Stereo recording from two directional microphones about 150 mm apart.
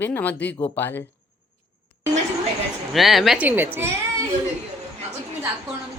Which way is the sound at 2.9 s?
Centre (ahead or behind).